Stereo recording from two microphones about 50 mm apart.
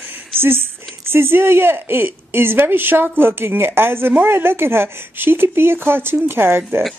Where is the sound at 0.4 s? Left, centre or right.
Right.